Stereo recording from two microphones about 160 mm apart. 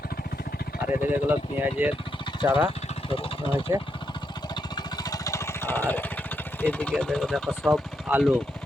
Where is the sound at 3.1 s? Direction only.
35° left (ahead or behind).